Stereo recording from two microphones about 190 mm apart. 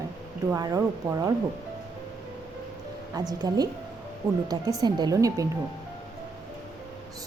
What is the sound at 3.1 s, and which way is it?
Speech, 20° right (ahead or behind).